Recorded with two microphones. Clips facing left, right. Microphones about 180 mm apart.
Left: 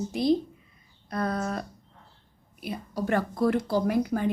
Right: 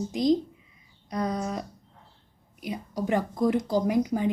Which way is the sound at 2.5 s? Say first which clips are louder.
Even; 15° right (ahead or behind).